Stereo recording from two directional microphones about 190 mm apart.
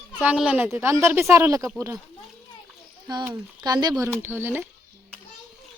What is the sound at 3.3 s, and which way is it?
Speech, 20° right (ahead or behind).